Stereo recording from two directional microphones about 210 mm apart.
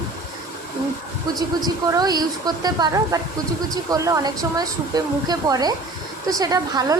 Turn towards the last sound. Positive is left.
turn(degrees=-15)  # may be behind; listen again after turning